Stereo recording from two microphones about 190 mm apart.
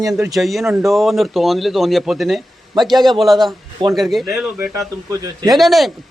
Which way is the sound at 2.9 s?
20° right (ahead or behind).